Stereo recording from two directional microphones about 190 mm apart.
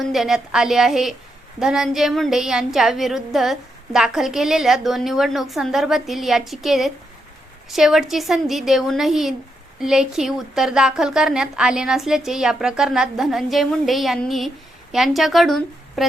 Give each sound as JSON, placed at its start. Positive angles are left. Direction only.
{"t": 0.0, "sound": "speech", "side_deg": 0}